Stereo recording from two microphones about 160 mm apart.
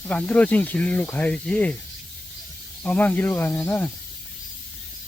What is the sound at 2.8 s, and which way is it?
Speech, 10° left (ahead or behind).